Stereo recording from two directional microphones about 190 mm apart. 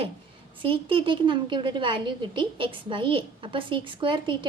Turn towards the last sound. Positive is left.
turn(degrees=-25)  # may be behind; listen again after turning